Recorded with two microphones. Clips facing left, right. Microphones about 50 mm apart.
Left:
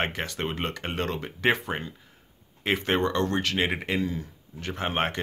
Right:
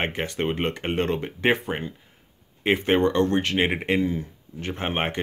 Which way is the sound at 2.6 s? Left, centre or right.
Centre.